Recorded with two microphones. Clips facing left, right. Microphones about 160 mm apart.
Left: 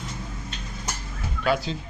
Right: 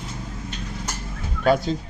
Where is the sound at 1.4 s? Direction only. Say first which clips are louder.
Right 5 dB; 45° right (ahead or behind).